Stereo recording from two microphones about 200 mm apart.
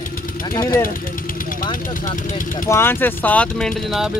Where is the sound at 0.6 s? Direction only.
15° left (ahead or behind).